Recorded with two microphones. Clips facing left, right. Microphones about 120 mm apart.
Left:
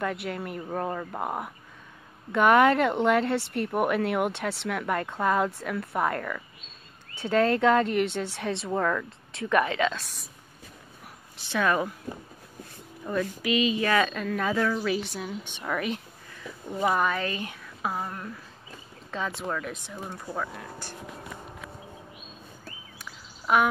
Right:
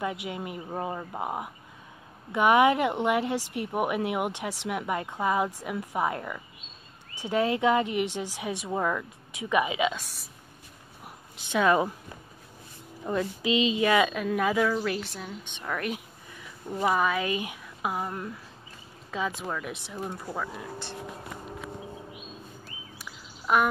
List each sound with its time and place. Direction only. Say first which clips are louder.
0.0 s speech: left 2 dB; 10° right (ahead or behind)
11.3 s speech: right 2 dB; 15° right (ahead or behind)
13.0 s speech: even; 25° right (ahead or behind)
22.9 s bird: even; centre (ahead or behind)